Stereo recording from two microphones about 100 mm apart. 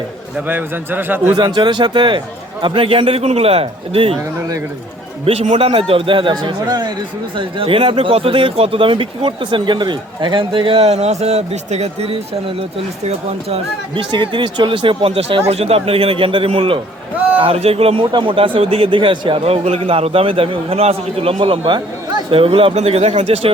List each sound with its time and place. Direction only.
0.3 s a man's voice: 20° right (ahead or behind)
1.4 s speech: 50° right (ahead or behind); by 4.2 s 75° right (ahead or behind)
5.2 s a man's voice: 85° right
5.9 s a man's voice: 60° right (ahead or behind)
7.3 s speech: 65° right (ahead or behind); by 12.1 s 90° right
13.9 s speech: 55° right (ahead or behind)
17.4 s a man's voice: 85° right
18.1 s speech: 55° right (ahead or behind)
19.5 s a man's voice: 85° right